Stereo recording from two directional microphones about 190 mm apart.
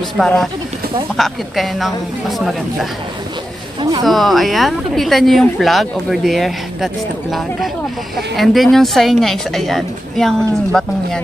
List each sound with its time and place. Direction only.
0.2 s speech: centre (ahead or behind)
4.0 s speech: centre (ahead or behind)